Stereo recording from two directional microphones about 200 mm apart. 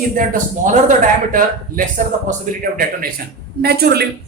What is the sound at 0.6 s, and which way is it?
A man's voice, 40° right (ahead or behind).